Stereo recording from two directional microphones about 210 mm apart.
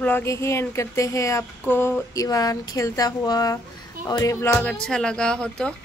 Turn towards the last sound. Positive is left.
turn(degrees=5)  # may be behind; listen again after turning